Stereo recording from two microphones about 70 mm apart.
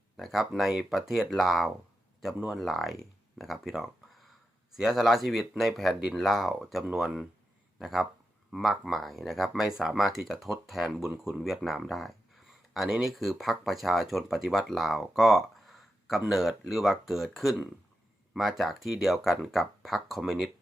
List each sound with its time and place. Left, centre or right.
0.2 s speech: centre